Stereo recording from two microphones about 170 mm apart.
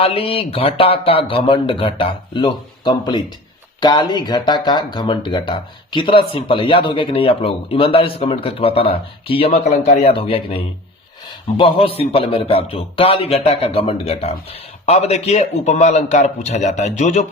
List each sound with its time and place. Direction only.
0.0 s speech: 35° left (ahead or behind)